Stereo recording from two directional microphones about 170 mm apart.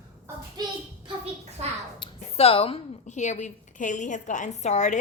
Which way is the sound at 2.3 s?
35° left (ahead or behind).